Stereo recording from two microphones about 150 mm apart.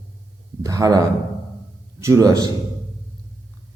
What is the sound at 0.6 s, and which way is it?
A man's voice, 20° right (ahead or behind).